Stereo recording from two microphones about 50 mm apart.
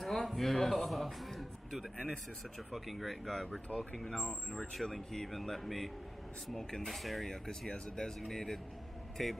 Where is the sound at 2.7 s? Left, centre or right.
Centre.